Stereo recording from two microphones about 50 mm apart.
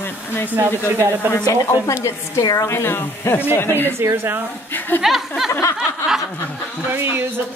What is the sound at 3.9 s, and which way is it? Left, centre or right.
Speech, right.